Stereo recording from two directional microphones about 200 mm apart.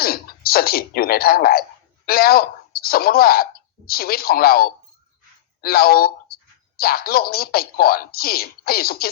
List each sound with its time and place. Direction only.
0.0 s speech: 50° left (ahead or behind)